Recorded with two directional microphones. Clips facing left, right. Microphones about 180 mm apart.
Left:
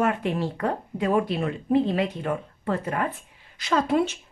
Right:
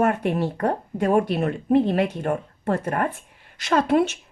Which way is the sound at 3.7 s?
65° right (ahead or behind).